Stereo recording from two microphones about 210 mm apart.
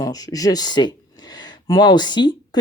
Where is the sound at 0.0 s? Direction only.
15° left (ahead or behind).